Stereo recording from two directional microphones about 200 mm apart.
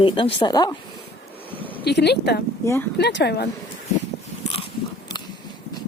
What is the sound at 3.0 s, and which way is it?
Speech, 55° left (ahead or behind).